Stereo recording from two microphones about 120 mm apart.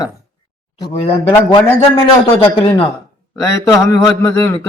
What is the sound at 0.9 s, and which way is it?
A man's voice, 55° left (ahead or behind).